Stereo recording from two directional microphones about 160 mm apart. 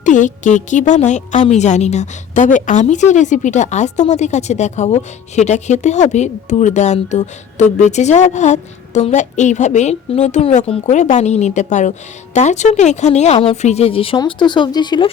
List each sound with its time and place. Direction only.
0.0 s a woman's voice: 50° left (ahead or behind); by 15.1 s 30° left (ahead or behind)